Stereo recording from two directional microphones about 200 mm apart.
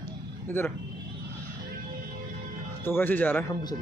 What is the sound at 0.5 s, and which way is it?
Speech, 10° left (ahead or behind).